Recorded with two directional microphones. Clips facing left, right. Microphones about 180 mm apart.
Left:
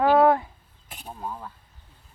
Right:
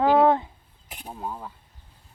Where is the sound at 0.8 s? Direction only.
10° right (ahead or behind).